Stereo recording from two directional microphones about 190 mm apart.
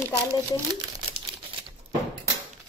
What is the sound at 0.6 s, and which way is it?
Speech, 20° right (ahead or behind).